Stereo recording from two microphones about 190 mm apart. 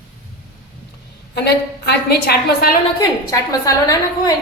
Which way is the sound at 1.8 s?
55° left (ahead or behind).